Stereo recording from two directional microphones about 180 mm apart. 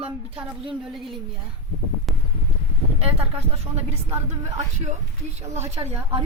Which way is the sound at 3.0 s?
35° right (ahead or behind).